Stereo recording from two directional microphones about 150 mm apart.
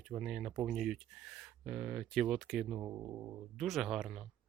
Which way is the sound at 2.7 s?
15° right (ahead or behind).